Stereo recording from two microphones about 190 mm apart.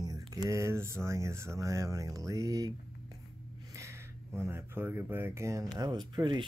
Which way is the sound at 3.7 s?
15° right (ahead or behind).